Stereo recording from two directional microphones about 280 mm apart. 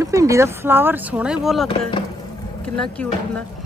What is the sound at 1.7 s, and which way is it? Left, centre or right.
Speech, centre.